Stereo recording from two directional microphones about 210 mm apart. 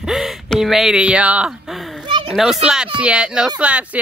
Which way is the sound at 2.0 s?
25° right (ahead or behind).